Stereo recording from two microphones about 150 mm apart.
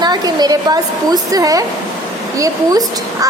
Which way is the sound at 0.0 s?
30° right (ahead or behind).